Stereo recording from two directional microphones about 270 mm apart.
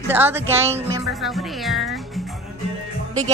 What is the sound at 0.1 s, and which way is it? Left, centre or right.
Speech, centre.